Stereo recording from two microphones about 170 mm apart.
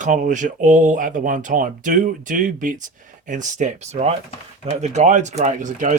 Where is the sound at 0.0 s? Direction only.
50° right (ahead or behind).